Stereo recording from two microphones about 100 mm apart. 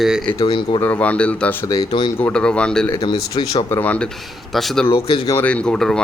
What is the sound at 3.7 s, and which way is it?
Speech, 20° left (ahead or behind).